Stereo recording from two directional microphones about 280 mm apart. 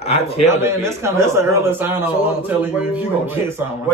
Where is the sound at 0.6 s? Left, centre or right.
Centre.